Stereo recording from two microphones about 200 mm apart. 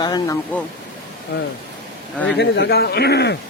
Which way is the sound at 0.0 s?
20° left (ahead or behind).